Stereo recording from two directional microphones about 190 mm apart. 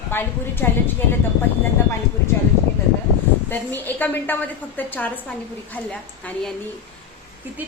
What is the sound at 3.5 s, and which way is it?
A woman's voice, 10° left (ahead or behind).